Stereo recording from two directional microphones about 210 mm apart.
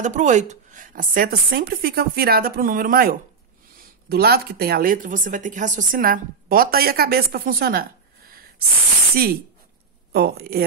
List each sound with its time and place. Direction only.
0.0 s speech: 35° right (ahead or behind)
9.1 s speech: 45° right (ahead or behind)